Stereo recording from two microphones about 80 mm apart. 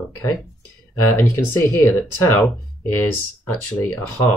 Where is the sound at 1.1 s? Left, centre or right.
Left.